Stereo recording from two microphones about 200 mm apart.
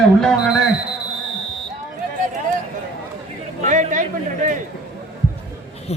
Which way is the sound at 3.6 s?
40° right (ahead or behind).